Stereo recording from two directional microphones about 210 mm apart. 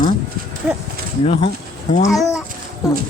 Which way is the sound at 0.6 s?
5° right (ahead or behind).